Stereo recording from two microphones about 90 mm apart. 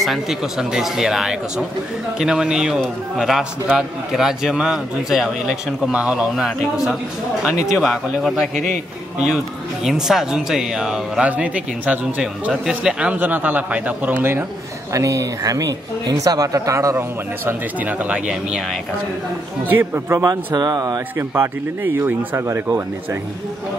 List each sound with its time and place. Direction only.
0.0 s a man's voice: centre (ahead or behind)
9.8 s speech: 5° right (ahead or behind)
14.9 s speech: 35° right (ahead or behind)
17.5 s speech: 15° right (ahead or behind)
19.7 s speech: 25° right (ahead or behind)
20.2 s speech: 45° right (ahead or behind)
21.2 s speech: 25° right (ahead or behind)